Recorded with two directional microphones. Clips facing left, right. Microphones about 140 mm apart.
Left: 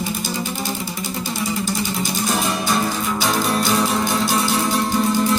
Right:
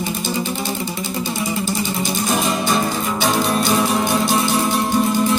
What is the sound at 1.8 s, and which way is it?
Music, 20° right (ahead or behind).